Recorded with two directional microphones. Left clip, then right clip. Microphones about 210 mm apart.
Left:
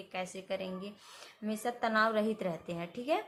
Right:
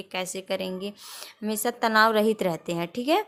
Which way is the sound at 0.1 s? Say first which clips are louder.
Right 8 dB; 50° right (ahead or behind).